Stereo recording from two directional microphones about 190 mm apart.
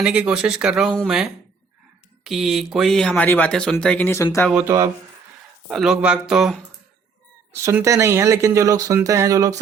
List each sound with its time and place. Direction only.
0.0 s speech: 5° right (ahead or behind); by 4.4 s 15° left (ahead or behind)
4.5 s speech: 15° right (ahead or behind)
5.6 s speech: 5° right (ahead or behind)